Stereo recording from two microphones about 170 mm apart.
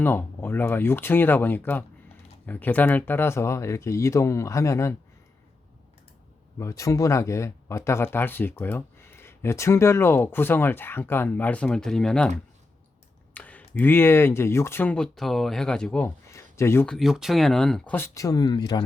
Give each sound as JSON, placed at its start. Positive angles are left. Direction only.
{"t": 0.0, "sound": "speech", "side_deg": 10}
{"t": 6.6, "sound": "speech", "side_deg": 20}
{"t": 13.3, "sound": "speech", "side_deg": 10}
{"t": 16.3, "sound": "a sound", "side_deg": 15}
{"t": 16.8, "sound": "speech", "side_deg": 0}